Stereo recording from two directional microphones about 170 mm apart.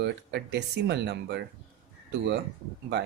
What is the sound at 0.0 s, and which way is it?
Speech, 80° right.